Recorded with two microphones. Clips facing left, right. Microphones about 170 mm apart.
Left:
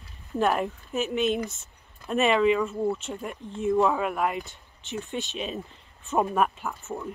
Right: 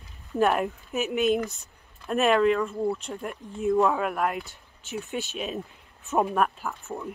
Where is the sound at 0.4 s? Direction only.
Centre (ahead or behind).